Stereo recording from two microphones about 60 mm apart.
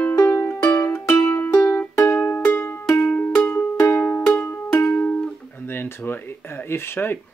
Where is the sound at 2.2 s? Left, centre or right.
Left.